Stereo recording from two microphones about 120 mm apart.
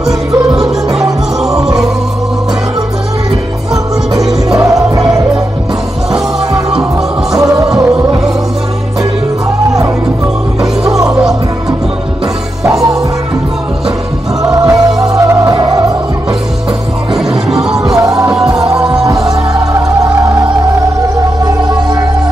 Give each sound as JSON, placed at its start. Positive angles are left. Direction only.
{"t": 4.3, "sound": "music", "side_deg": -30}
{"t": 7.3, "sound": "music", "side_deg": -30}
{"t": 10.9, "sound": "music", "side_deg": -30}
{"t": 14.4, "sound": "music", "side_deg": -30}
{"t": 17.1, "sound": "music", "side_deg": -5}
{"t": 17.7, "sound": "music", "side_deg": -30}